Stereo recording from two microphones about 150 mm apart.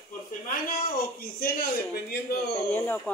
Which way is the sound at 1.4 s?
90° left.